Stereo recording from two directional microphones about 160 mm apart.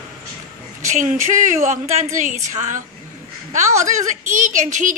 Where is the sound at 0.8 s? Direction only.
50° right (ahead or behind).